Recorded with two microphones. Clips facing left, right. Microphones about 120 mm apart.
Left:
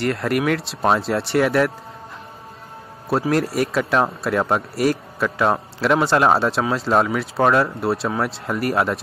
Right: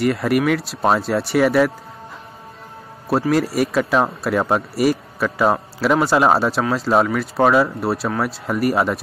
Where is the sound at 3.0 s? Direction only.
Centre (ahead or behind).